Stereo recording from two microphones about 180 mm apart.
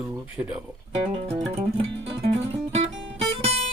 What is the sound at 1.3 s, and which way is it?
Music, 35° right (ahead or behind).